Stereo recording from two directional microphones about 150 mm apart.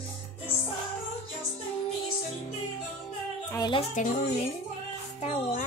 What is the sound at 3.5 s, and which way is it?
Speech, 30° left (ahead or behind).